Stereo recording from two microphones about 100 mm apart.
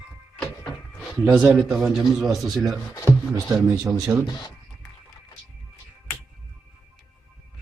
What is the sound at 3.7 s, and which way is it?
Speech, 30° right (ahead or behind).